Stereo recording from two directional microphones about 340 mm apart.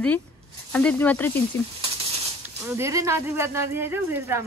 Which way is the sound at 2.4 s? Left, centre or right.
Centre.